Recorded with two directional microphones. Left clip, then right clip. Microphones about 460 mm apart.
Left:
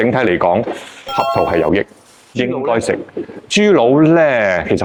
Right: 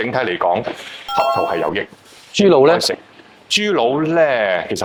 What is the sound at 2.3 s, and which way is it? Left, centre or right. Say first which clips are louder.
Speech: right 7 dB; right.